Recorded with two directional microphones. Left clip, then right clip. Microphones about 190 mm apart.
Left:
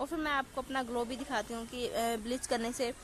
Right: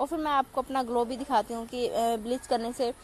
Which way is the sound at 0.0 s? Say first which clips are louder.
Right 7 dB; 10° right (ahead or behind).